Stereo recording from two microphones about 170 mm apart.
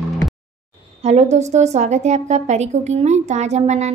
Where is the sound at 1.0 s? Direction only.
40° right (ahead or behind).